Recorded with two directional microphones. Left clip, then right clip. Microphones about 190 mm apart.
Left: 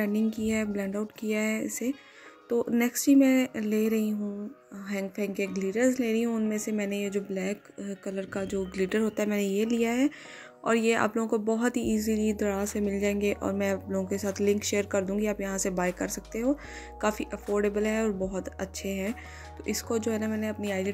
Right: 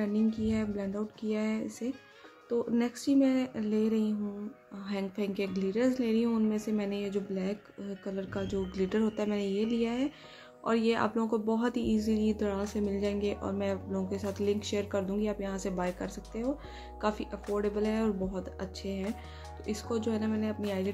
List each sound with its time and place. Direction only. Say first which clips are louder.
0.0 s speech: left 2 dB; 30° left (ahead or behind)
4.7 s speech: left 3 dB; 20° left (ahead or behind)